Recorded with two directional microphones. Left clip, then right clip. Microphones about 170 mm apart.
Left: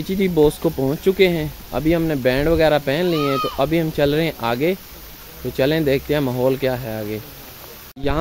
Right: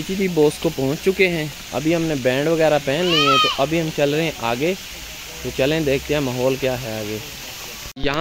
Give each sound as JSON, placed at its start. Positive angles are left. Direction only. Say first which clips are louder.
{"t": 0.2, "sound": "speech", "louder": "left 1 dB", "side_deg": 10}
{"t": 3.5, "sound": "speech", "louder": "left 1 dB", "side_deg": 30}
{"t": 8.0, "sound": "speech", "louder": "even", "side_deg": 15}